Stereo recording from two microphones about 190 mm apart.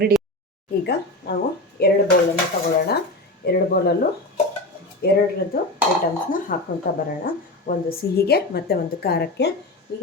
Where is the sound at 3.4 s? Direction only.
55° left (ahead or behind).